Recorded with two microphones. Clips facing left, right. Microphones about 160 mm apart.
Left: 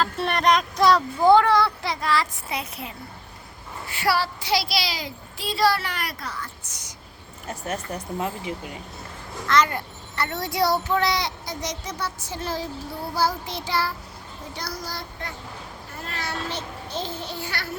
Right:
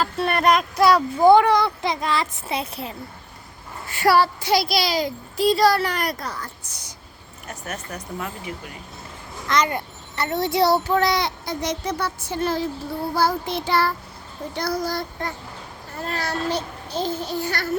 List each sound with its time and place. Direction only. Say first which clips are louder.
0.0 s speech: right 2 dB; 5° right (ahead or behind); by 2.9 s 30° right (ahead or behind)
3.9 s speech: right 6 dB; 50° right (ahead or behind); by 6.9 s 35° right (ahead or behind)
7.4 s speech: left 3 dB; 30° left (ahead or behind)
9.5 s a child's voice: even; 20° right (ahead or behind)
10.9 s a child's voice: right 3 dB; 50° right (ahead or behind)
16.0 s a child's voice: right 5 dB; 40° right (ahead or behind)